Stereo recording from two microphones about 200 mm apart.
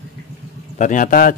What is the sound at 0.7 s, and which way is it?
Speech, 40° left (ahead or behind).